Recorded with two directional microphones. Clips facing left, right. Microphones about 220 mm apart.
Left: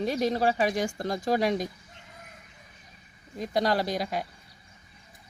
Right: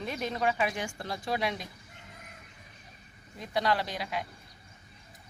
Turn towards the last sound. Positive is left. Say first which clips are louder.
# left 6 dB
turn(degrees=40)  # may be behind; listen again after turning